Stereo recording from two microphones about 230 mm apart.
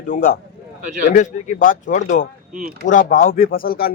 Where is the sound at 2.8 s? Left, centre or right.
Left.